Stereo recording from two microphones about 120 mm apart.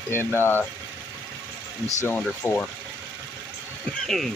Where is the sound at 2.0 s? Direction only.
15° left (ahead or behind).